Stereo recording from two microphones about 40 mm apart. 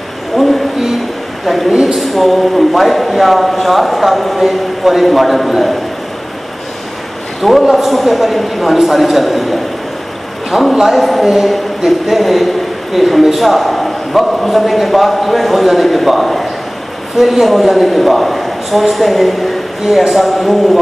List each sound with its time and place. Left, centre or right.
1.4 s a man's voice: centre
1.7 s speech: centre
2.0 s a man's voice: centre
7.7 s a man's voice: centre